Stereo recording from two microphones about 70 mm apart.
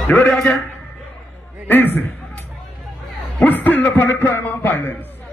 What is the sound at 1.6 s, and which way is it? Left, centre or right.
Speech, left.